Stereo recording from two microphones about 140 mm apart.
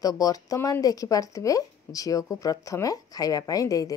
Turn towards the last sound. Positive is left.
turn(degrees=25)  # may be behind; listen again after turning